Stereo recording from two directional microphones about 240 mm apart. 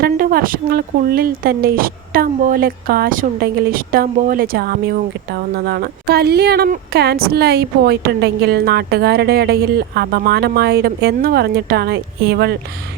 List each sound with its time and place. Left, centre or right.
0.0 s speech: right